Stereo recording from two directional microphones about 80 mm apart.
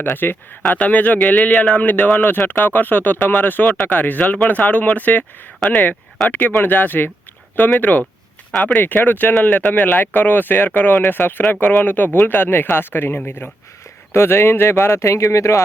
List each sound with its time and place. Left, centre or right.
0.0 s a man's voice: left
6.2 s a man's voice: left